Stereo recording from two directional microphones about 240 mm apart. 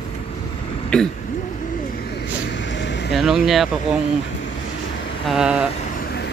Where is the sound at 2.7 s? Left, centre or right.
Left.